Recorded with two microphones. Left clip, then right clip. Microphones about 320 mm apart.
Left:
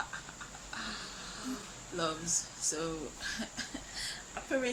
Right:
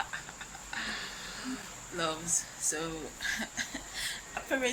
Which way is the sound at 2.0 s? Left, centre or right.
Centre.